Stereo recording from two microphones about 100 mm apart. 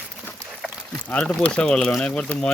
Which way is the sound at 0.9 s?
10° left (ahead or behind).